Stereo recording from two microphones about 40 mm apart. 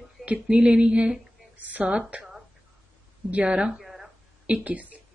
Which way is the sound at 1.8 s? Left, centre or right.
Right.